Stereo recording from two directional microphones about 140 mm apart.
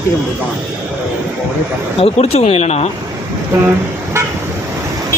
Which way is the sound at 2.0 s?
50° left (ahead or behind).